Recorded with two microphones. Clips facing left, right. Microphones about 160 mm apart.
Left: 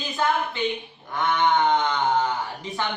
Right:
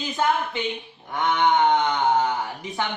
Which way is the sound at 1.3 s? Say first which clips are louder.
Right 1 dB; 15° right (ahead or behind).